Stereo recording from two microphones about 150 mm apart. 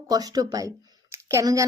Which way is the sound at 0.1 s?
25° right (ahead or behind).